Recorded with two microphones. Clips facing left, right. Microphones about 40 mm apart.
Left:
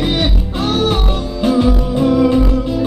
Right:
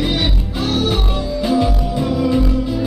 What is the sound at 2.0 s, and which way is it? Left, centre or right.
Music, centre.